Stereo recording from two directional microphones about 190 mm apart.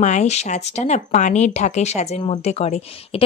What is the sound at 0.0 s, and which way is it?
Speech, 35° left (ahead or behind).